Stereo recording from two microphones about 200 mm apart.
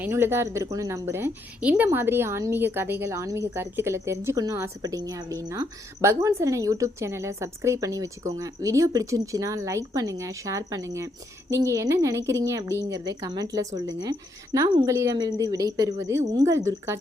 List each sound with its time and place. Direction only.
0.0 s a woman's voice: 10° right (ahead or behind)